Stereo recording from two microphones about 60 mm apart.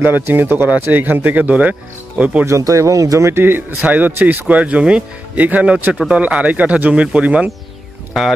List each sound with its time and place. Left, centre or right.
0.0 s speech: right
2.4 s speech: right
3.4 s speech: right
8.1 s speech: centre